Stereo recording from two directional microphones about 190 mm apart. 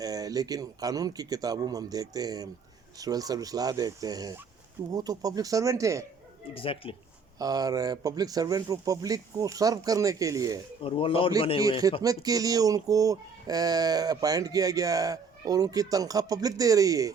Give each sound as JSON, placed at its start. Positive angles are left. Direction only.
{"t": 0.0, "sound": "speech", "side_deg": -20}
{"t": 6.5, "sound": "speech", "side_deg": 30}
{"t": 7.3, "sound": "speech", "side_deg": -20}
{"t": 10.8, "sound": "speech", "side_deg": 30}
{"t": 12.0, "sound": "speech", "side_deg": -20}